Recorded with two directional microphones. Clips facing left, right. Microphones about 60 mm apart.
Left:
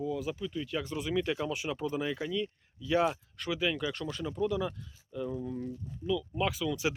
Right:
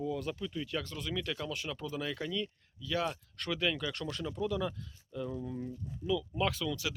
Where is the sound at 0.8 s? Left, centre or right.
Centre.